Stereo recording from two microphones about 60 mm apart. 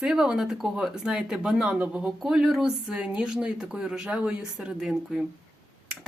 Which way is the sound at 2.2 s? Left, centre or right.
Centre.